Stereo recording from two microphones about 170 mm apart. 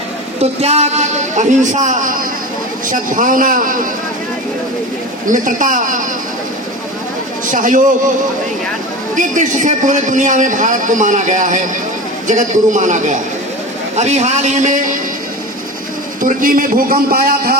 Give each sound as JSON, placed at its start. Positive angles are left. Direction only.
{"t": 0.6, "sound": "a man's voice", "side_deg": -40}
{"t": 5.3, "sound": "a man's voice", "side_deg": -50}
{"t": 7.5, "sound": "a man's voice", "side_deg": -50}
{"t": 9.1, "sound": "a man's voice", "side_deg": -50}
{"t": 16.2, "sound": "a man's voice", "side_deg": -55}